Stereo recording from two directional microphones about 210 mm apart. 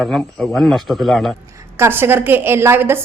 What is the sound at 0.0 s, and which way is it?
A man's voice, centre (ahead or behind).